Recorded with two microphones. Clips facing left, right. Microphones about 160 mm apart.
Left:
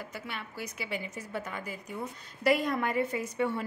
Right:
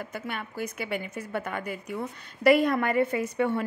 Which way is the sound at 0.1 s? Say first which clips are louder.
Right 5 dB; 50° right (ahead or behind).